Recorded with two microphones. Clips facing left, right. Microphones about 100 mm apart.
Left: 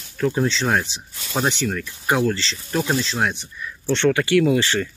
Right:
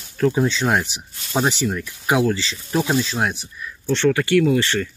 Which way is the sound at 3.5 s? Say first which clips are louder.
Left 1 dB; centre (ahead or behind).